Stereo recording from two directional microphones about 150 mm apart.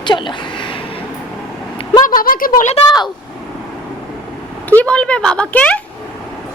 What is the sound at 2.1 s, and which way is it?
Speech, 70° left (ahead or behind).